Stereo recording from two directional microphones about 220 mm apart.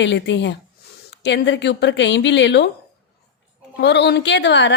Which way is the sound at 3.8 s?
50° left (ahead or behind).